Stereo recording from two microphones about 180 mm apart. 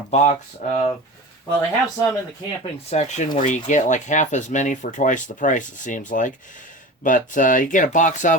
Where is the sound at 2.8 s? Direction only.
40° left (ahead or behind).